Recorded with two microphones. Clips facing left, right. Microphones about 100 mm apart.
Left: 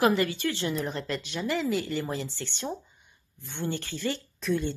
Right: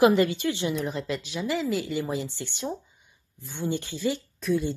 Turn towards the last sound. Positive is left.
turn(degrees=-5)  # may be behind; listen again after turning